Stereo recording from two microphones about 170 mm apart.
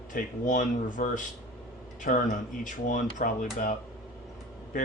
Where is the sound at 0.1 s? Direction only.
50° left (ahead or behind).